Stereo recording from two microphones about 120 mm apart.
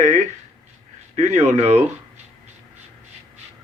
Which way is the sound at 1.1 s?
70° right (ahead or behind).